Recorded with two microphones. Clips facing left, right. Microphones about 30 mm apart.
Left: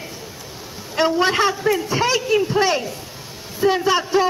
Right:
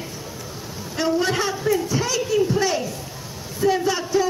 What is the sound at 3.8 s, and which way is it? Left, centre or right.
Speech, left.